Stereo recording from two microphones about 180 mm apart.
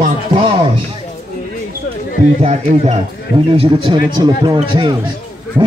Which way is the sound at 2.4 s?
40° right (ahead or behind).